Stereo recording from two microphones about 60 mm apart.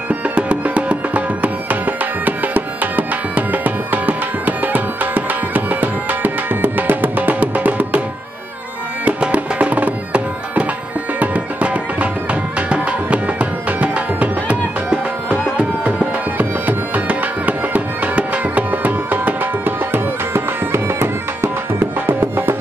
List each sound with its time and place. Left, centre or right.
0.1 s music: right
9.2 s music: right